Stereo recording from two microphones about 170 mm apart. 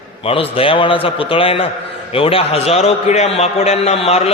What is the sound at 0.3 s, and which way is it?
A man's voice, 35° left (ahead or behind).